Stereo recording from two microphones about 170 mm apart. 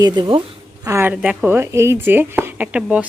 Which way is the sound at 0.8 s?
15° right (ahead or behind).